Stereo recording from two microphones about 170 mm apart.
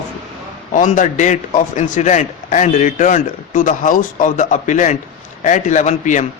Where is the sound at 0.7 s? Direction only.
50° left (ahead or behind).